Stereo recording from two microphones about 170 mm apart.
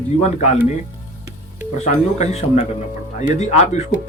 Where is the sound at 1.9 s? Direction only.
40° left (ahead or behind).